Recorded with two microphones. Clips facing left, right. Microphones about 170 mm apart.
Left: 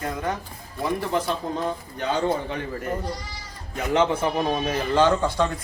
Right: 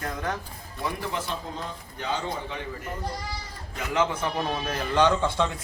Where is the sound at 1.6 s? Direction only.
55° left (ahead or behind).